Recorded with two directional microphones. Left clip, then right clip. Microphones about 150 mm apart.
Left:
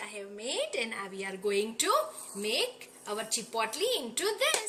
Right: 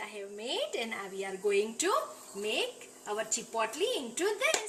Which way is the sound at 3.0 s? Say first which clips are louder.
Even; 35° right (ahead or behind).